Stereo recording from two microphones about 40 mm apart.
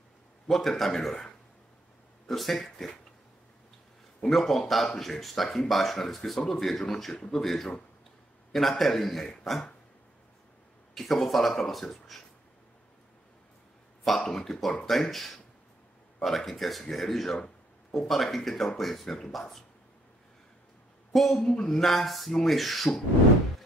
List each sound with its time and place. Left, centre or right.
0.5 s speech: centre
4.2 s speech: centre
7.2 s speech: centre
7.4 s speech: centre
11.0 s speech: centre
14.0 s speech: centre
21.1 s speech: centre